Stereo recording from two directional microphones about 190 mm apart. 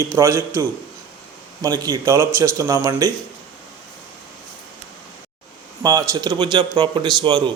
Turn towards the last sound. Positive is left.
turn(degrees=-25)  # may be behind; listen again after turning